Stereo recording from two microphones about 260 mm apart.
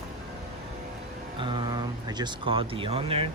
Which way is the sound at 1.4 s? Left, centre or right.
Centre.